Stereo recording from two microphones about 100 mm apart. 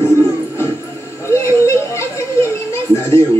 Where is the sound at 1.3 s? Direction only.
25° left (ahead or behind).